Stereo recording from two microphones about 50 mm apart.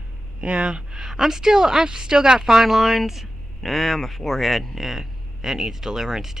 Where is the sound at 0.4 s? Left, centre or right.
Right.